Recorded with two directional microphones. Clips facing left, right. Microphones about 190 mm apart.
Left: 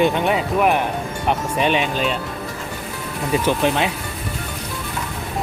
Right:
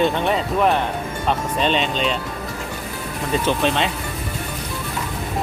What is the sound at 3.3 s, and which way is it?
Speech, 10° left (ahead or behind).